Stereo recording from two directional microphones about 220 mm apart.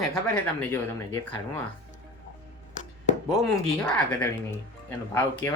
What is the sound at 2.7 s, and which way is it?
Chopping, 35° left (ahead or behind).